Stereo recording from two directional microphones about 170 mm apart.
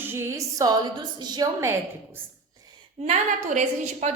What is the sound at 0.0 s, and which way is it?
A woman's voice, 15° right (ahead or behind).